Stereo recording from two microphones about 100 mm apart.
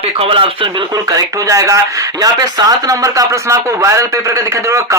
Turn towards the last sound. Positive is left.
turn(degrees=-30)  # may be behind; listen again after turning